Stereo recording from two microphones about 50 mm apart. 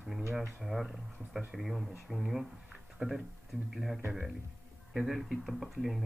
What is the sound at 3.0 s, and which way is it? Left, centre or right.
Speech, centre.